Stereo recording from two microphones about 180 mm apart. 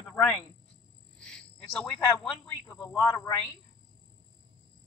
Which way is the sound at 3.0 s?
20° left (ahead or behind).